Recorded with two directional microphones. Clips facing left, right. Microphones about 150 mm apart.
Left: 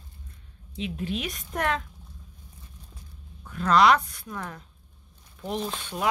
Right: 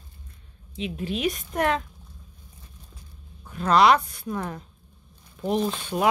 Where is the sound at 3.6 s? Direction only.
30° right (ahead or behind).